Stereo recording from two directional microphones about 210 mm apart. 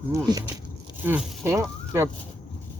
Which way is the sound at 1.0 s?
10° right (ahead or behind).